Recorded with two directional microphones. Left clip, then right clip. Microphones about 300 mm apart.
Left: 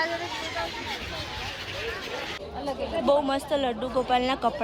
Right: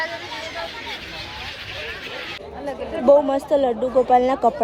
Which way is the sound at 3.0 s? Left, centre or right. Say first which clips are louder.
Right 9 dB; left.